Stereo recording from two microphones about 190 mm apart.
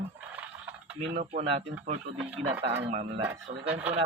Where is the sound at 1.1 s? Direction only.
40° right (ahead or behind).